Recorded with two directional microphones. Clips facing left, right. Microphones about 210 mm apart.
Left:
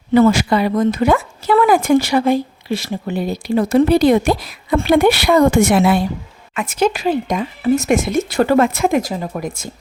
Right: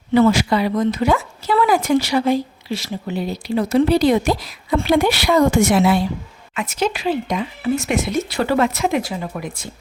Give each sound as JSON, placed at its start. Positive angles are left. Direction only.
{"t": 0.1, "sound": "speech", "side_deg": 50}